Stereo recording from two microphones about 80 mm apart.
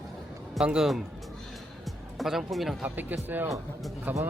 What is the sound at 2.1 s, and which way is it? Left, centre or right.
Speech, centre.